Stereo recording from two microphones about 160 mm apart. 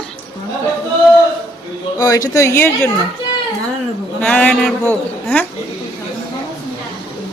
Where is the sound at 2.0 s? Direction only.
25° left (ahead or behind).